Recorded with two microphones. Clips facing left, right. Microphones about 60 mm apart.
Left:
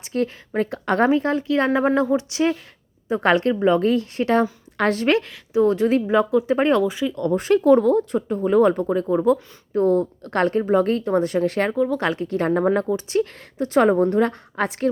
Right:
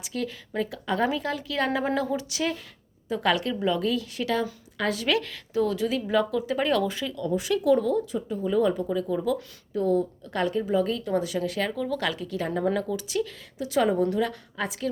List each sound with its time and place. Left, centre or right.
0.0 s speech: left
1.1 s speech: left
3.1 s speech: left
4.8 s a woman's voice: left
5.2 s speech: left
5.7 s speech: left
6.1 s speech: left
6.8 s speech: centre
7.2 s speech: left
11.7 s speech: left